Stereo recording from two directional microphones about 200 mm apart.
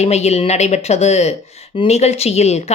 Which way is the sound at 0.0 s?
35° left (ahead or behind).